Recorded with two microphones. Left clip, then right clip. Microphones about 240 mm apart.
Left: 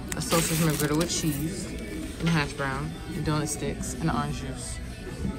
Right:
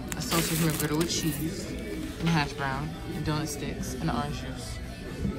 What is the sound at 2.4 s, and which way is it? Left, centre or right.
Speech, centre.